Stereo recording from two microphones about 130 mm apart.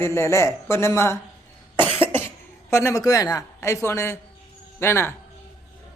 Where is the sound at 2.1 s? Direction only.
20° left (ahead or behind).